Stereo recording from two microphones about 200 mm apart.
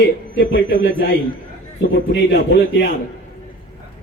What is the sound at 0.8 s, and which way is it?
Speech, 70° left (ahead or behind).